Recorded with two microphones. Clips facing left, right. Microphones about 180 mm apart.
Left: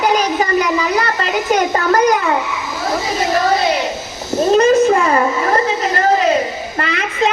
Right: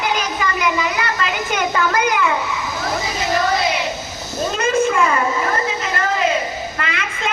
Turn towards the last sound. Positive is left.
turn(degrees=40)  # may be behind; listen again after turning